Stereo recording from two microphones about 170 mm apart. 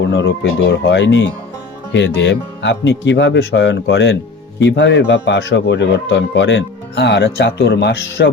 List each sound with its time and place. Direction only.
0.1 s speech: 90° left